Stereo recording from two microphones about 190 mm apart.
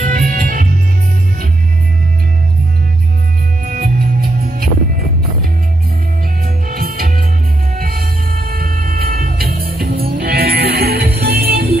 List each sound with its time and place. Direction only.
0.0 s music: 45° right (ahead or behind)
3.6 s music: 45° right (ahead or behind)
6.4 s music: 50° right (ahead or behind)